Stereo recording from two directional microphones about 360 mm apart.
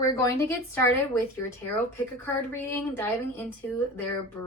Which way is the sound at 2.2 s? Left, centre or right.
Centre.